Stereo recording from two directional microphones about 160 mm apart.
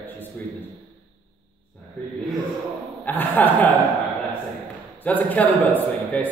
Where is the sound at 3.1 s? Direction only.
10° left (ahead or behind).